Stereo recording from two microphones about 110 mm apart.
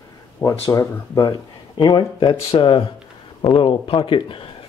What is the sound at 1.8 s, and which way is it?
Speech, 45° left (ahead or behind).